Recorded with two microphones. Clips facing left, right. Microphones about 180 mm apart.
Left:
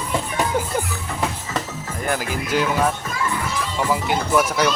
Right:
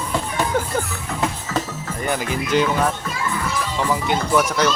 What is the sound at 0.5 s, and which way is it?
Music, 10° left (ahead or behind).